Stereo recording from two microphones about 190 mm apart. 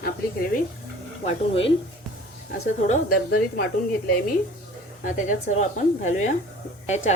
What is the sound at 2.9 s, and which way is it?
Speech, 50° left (ahead or behind).